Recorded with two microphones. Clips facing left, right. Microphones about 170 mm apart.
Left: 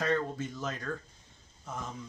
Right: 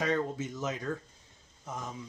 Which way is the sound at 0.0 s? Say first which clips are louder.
Even; 15° right (ahead or behind).